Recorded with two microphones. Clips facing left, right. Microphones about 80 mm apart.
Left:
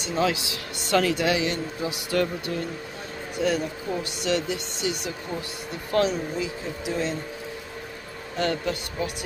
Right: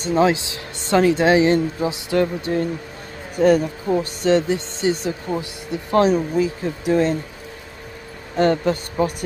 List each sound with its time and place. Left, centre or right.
0.0 s speech: right
3.3 s speech: right
5.4 s speech: right
5.9 s speech: right
8.4 s speech: right